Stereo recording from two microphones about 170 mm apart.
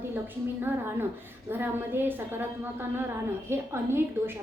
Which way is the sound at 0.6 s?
15° right (ahead or behind).